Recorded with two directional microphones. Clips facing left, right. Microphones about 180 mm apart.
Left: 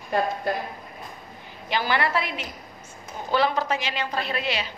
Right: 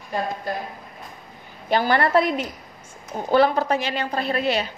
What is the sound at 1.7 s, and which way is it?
A woman's voice, 45° right (ahead or behind).